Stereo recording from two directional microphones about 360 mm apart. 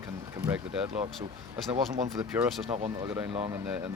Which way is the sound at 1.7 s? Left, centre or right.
Centre.